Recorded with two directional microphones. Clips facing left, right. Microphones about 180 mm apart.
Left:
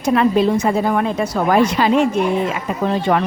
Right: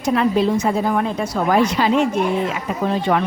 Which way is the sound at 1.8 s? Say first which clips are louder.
Left 2 dB; 55° left (ahead or behind).